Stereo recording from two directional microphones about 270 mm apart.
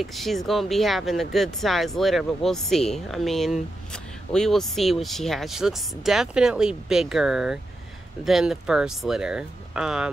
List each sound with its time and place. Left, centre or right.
0.0 s speech: centre